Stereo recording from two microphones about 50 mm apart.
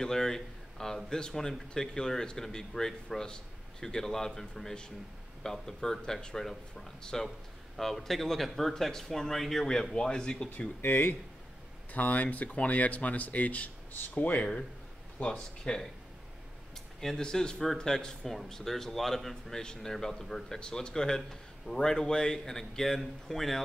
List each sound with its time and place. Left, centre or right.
0.0 s a man's voice: centre
10.8 s speech: left
11.9 s speech: left
15.1 s speech: left
17.0 s speech: centre